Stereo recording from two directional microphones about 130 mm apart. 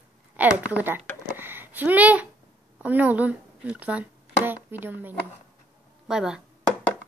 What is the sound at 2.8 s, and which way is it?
Speech, 10° right (ahead or behind).